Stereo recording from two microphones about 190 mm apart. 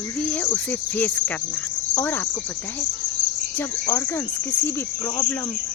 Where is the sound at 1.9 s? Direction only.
10° left (ahead or behind).